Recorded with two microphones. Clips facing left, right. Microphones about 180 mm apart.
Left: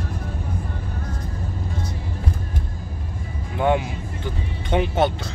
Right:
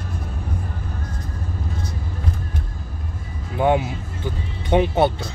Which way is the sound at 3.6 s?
20° right (ahead or behind).